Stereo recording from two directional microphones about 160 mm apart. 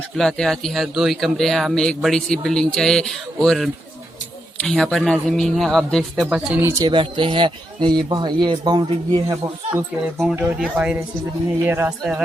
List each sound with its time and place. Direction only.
0.2 s speech: 5° left (ahead or behind)
6.2 s speech: 10° right (ahead or behind)
6.8 s speech: 30° right (ahead or behind)
10.6 s speech: 5° right (ahead or behind)